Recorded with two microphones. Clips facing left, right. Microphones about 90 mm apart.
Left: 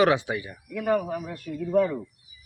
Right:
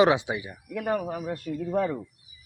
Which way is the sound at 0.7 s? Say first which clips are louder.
Left 3 dB; 30° right (ahead or behind).